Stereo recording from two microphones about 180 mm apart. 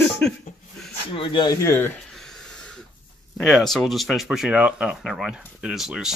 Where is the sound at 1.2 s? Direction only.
25° left (ahead or behind).